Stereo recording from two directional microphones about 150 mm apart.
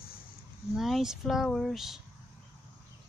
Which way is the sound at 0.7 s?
Centre (ahead or behind).